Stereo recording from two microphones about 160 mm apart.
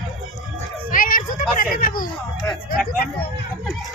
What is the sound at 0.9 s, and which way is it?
A child's voice, 60° left (ahead or behind).